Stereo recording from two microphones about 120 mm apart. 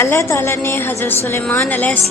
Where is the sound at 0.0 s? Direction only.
20° left (ahead or behind).